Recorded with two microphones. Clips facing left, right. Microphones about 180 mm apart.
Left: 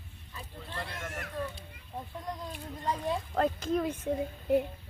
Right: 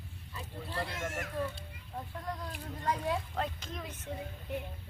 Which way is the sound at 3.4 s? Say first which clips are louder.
Left 10 dB; 45° left (ahead or behind).